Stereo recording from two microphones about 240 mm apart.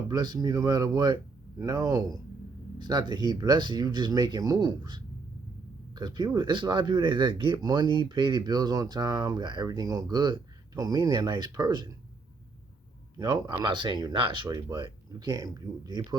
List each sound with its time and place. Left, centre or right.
0.1 s speech: centre
13.1 s speech: centre